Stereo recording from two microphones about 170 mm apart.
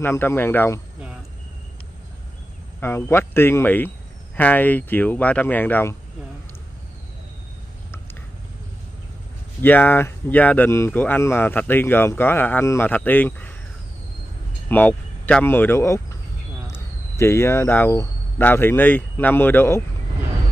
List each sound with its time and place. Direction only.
0.0 s speech: 15° left (ahead or behind)
2.8 s speech: 15° left (ahead or behind)
9.6 s speech: 10° left (ahead or behind)
14.7 s speech: 10° left (ahead or behind)